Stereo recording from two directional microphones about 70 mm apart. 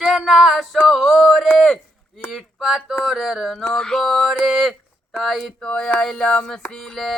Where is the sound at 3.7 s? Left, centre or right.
Centre.